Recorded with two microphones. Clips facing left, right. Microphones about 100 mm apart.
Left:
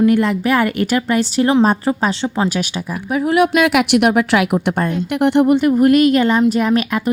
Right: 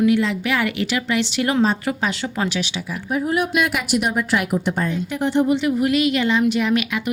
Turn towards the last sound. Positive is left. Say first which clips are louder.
# left 4 dB
turn(degrees=40)  # may be behind; listen again after turning